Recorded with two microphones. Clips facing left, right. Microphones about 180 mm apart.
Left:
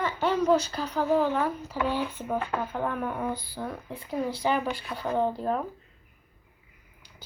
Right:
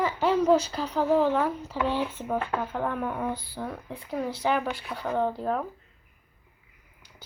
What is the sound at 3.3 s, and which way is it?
Speech, 25° right (ahead or behind).